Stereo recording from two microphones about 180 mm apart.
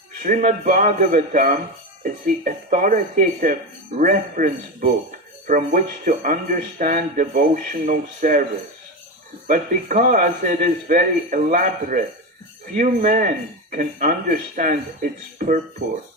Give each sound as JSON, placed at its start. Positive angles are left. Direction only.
{"t": 0.2, "sound": "speech", "side_deg": -45}
{"t": 9.5, "sound": "speech", "side_deg": -45}